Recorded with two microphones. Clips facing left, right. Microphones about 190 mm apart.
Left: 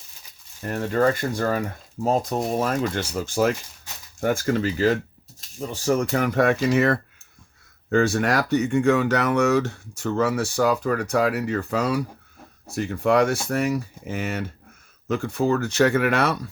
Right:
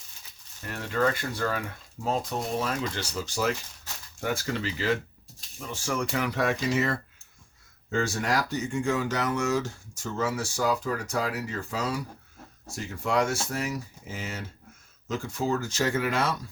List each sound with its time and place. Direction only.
0.6 s speech: 45° left (ahead or behind); by 16.5 s 65° left (ahead or behind)